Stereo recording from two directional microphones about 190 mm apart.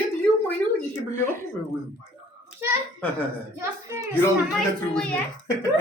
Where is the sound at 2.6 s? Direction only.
15° right (ahead or behind).